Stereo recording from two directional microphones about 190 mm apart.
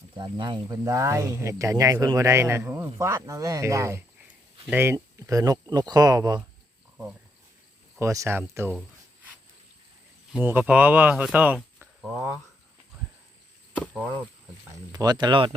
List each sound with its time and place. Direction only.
0.2 s speech: 25° right (ahead or behind)
7.9 s speech: 15° right (ahead or behind)
10.3 s speech: 10° right (ahead or behind)
14.9 s speech: 20° right (ahead or behind)